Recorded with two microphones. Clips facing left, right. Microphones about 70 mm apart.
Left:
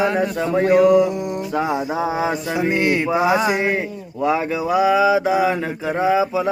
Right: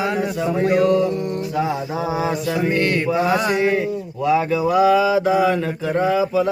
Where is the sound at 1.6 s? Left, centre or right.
Left.